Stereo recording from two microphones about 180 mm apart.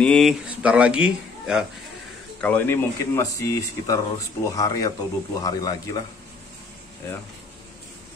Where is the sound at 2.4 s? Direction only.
10° left (ahead or behind).